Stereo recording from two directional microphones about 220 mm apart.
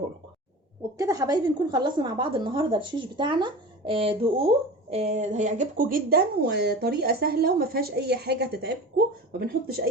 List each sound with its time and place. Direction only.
0.9 s a woman's voice: 15° right (ahead or behind); by 9.8 s 45° right (ahead or behind)